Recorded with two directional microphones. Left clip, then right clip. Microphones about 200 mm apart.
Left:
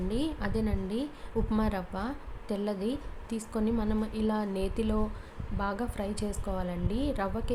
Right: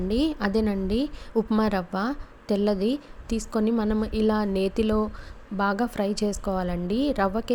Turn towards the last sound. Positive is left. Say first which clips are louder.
# right 8 dB
turn(degrees=-35)  # may be behind; listen again after turning